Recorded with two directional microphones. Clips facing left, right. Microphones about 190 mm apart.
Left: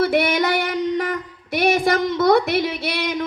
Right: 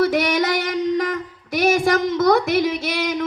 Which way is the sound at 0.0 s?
40° right (ahead or behind).